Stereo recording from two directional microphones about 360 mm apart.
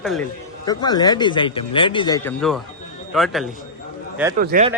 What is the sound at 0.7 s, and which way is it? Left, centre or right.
A man's voice, centre.